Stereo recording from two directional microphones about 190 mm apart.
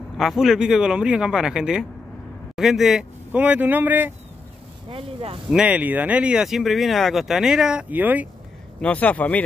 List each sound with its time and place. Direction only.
0.2 s speech: centre (ahead or behind)
4.8 s speech: 30° right (ahead or behind)
5.5 s speech: 5° right (ahead or behind)
8.8 s speech: 10° left (ahead or behind)